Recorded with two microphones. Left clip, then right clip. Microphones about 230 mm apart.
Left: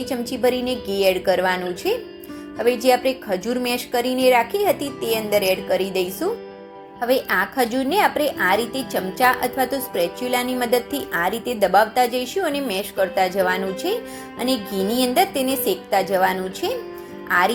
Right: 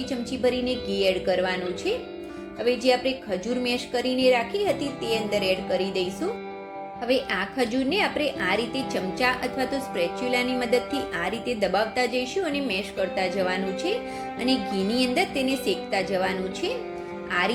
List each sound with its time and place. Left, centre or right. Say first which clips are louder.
0.0 s a woman's voice: left 5 dB; centre
7.1 s a woman's voice: left 5 dB; centre